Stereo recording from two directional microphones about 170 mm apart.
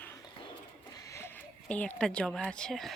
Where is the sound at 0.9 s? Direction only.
20° left (ahead or behind).